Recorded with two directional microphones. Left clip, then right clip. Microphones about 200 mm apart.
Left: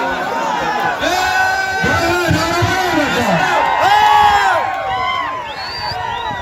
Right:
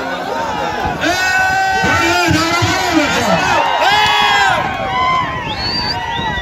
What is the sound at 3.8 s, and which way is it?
Crowd, 35° left (ahead or behind).